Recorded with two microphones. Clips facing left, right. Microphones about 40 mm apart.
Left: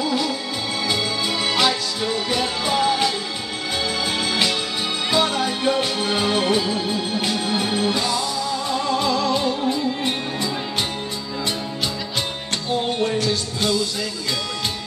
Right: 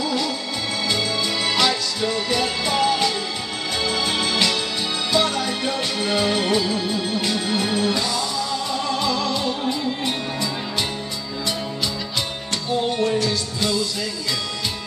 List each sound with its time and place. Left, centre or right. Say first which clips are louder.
1.4 s music: left 1 dB; centre
9.0 s music: left 2 dB; left
13.0 s music: even; left